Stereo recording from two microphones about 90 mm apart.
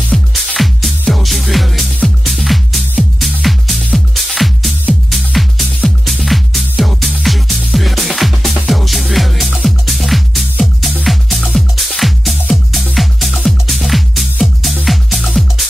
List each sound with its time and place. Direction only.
0.1 s music: 5° left (ahead or behind)